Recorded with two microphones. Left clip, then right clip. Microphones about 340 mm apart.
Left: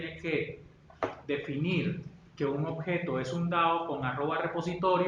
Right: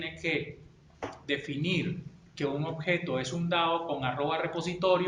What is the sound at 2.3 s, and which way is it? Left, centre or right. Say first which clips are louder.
Speech: even; right.